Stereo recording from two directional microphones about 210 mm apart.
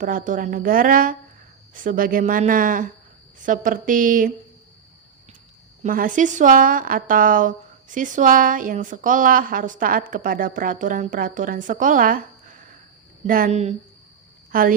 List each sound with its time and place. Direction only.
0.0 s a woman's voice: 40° right (ahead or behind)
5.8 s a woman's voice: 40° right (ahead or behind)